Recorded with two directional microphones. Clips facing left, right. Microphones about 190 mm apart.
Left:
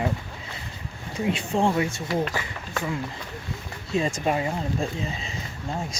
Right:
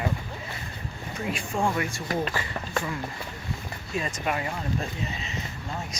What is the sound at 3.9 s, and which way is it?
Speech, 25° left (ahead or behind).